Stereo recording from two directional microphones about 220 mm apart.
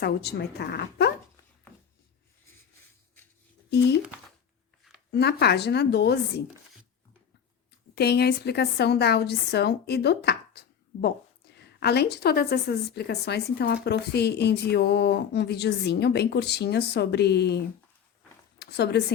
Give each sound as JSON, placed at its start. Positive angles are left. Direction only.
{"t": 0.0, "sound": "a woman's voice", "side_deg": 45}
{"t": 5.1, "sound": "a woman's voice", "side_deg": 50}
{"t": 7.9, "sound": "a woman's voice", "side_deg": 45}